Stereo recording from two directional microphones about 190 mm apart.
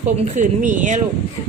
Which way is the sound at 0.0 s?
40° right (ahead or behind).